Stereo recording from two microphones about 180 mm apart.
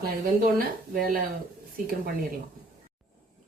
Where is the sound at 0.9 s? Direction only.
55° right (ahead or behind).